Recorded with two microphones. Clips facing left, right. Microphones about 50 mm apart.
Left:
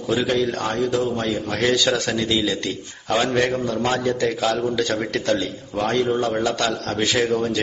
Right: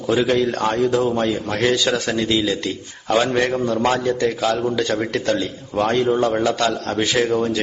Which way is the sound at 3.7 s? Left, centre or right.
Centre.